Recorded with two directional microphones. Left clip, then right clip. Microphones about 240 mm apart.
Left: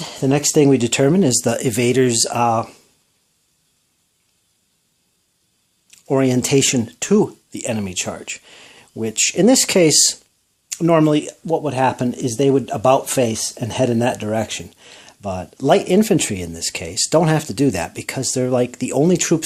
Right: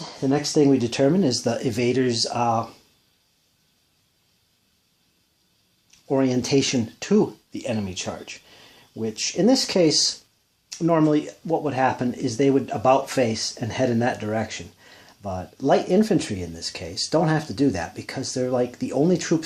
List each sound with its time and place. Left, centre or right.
0.0 s speech: left
5.9 s speech: left